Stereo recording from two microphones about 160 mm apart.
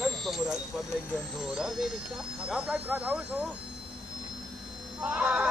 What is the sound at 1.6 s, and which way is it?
Speech, 5° right (ahead or behind).